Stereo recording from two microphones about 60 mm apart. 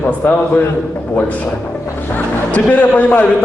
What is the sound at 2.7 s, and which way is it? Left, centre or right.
Speech, left.